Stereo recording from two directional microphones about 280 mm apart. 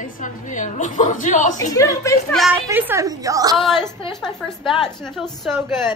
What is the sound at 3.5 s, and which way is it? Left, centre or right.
A woman's voice, centre.